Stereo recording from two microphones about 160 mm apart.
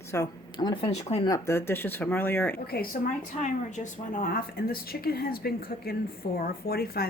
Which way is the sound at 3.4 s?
50° left (ahead or behind).